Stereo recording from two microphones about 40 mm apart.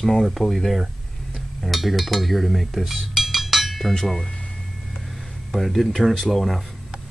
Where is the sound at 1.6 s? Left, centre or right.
Centre.